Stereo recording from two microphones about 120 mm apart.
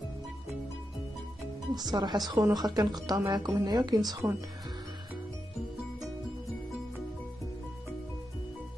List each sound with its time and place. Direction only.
1.8 s a woman's voice: 35° right (ahead or behind)
4.2 s speech: 15° right (ahead or behind)